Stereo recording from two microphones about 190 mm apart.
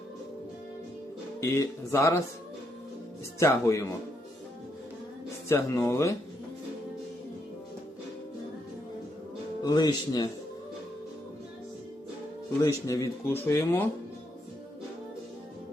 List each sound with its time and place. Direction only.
1.4 s speech: 15° left (ahead or behind)
3.4 s speech: 15° left (ahead or behind)
5.5 s speech: 15° left (ahead or behind)
9.6 s speech: 20° left (ahead or behind)
12.6 s speech: 15° left (ahead or behind)